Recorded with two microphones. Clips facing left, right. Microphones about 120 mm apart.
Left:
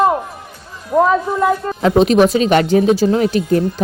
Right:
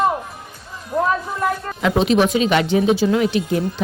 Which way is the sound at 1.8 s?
40° left (ahead or behind).